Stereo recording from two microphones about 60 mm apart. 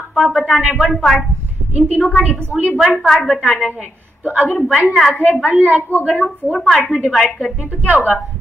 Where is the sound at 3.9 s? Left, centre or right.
Right.